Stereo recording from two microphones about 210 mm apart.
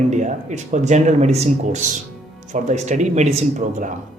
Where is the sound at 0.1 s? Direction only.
35° right (ahead or behind).